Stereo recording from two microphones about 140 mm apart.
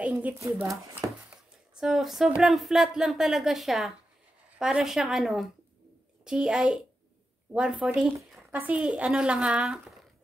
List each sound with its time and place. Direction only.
0.0 s speech: 10° right (ahead or behind)
1.0 s a sound: 25° right (ahead or behind)
1.8 s speech: 5° right (ahead or behind)